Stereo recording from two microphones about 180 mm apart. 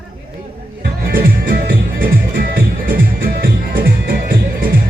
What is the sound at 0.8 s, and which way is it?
Music, 55° right (ahead or behind).